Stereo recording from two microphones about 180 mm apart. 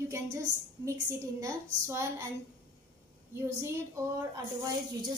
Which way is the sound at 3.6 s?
15° right (ahead or behind).